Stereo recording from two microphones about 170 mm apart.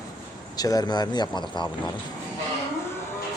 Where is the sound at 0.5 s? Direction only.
20° left (ahead or behind).